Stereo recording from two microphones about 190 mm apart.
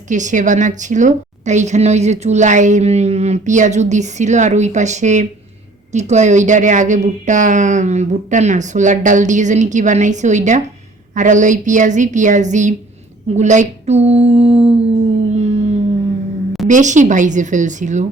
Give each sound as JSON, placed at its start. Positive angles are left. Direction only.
{"t": 0.1, "sound": "a woman's voice", "side_deg": -40}
{"t": 15.3, "sound": "a sound", "side_deg": -35}
{"t": 16.6, "sound": "a woman's voice", "side_deg": -40}